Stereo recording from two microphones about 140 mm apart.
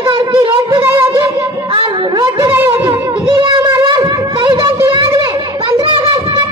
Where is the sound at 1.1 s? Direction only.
35° right (ahead or behind).